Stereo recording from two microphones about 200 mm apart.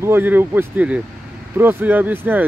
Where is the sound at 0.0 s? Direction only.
10° right (ahead or behind).